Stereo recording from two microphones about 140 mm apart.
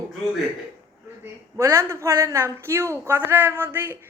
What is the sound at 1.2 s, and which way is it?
A man's voice, 20° right (ahead or behind).